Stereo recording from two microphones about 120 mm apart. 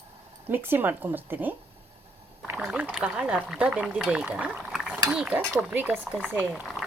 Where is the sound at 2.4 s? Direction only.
20° right (ahead or behind).